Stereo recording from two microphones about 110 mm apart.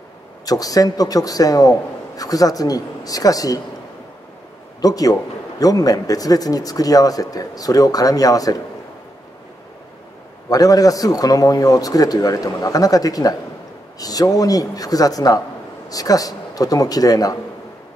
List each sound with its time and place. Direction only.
0.5 s a man's voice: 35° left (ahead or behind)
4.8 s a man's voice: 35° left (ahead or behind)
10.5 s a man's voice: 35° left (ahead or behind)